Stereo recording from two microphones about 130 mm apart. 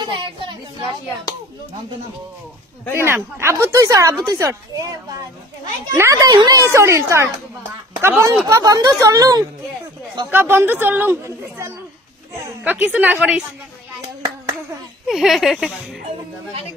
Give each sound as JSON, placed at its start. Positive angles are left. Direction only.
{"t": 0.0, "sound": "a sound", "side_deg": -35}
{"t": 3.0, "sound": "speech", "side_deg": -20}
{"t": 5.9, "sound": "a woman's voice", "side_deg": -20}
{"t": 15.0, "sound": "speech", "side_deg": 0}